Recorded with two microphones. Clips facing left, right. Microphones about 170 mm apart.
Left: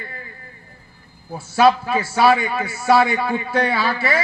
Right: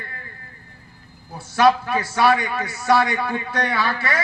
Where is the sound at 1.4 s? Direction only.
25° left (ahead or behind).